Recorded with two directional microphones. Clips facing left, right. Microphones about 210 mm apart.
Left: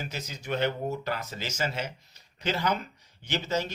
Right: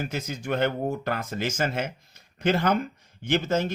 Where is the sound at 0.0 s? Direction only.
50° right (ahead or behind).